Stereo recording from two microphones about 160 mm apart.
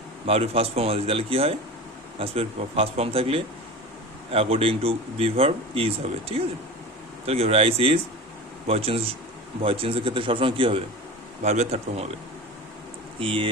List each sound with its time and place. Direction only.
0.3 s speech: 40° right (ahead or behind)
11.4 s speech: 45° right (ahead or behind)
13.1 s speech: 35° right (ahead or behind)